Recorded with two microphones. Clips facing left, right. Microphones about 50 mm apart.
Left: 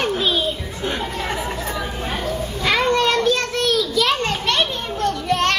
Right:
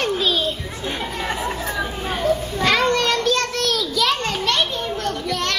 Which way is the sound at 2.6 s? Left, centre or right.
Centre.